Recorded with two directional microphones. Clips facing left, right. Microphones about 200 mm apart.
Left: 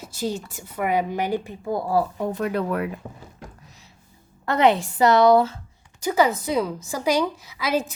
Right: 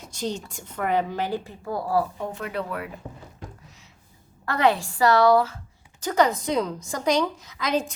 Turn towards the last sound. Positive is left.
turn(degrees=5)  # may be behind; listen again after turning